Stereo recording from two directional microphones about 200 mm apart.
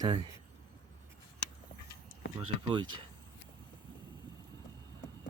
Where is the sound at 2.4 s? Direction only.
25° right (ahead or behind).